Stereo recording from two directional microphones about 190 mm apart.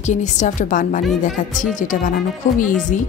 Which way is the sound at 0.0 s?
40° left (ahead or behind).